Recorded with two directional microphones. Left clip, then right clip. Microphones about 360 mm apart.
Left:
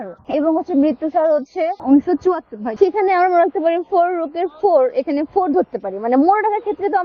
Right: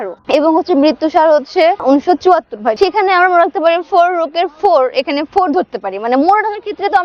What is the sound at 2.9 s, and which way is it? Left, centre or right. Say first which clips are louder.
Speech: right 5 dB; right.